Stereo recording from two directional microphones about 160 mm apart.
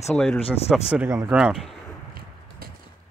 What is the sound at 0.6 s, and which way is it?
Speech, 5° right (ahead or behind).